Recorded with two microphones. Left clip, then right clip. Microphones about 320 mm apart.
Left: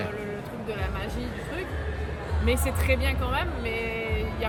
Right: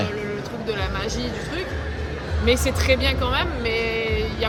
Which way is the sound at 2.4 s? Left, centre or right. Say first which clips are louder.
Right 7 dB; centre.